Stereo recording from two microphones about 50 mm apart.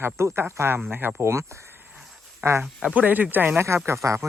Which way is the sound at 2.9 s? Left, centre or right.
Right.